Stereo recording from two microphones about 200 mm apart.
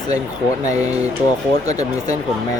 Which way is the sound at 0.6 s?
35° right (ahead or behind).